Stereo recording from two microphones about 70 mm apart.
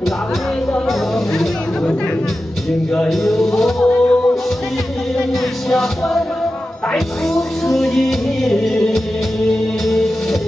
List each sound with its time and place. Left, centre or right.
3.1 s music: centre
5.7 s music: centre